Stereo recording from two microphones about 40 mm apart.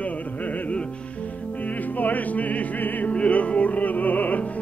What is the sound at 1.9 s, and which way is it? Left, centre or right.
Music, left.